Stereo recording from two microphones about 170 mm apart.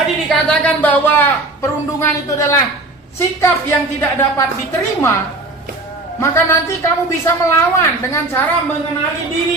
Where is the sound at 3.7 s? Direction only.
15° left (ahead or behind).